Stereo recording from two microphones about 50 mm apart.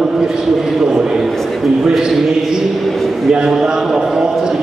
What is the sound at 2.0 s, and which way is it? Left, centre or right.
A man's voice, centre.